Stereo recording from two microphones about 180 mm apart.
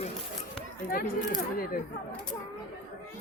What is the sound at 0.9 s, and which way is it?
Speech, 55° left (ahead or behind).